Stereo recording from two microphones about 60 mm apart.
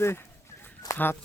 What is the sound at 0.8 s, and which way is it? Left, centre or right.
Speech, left.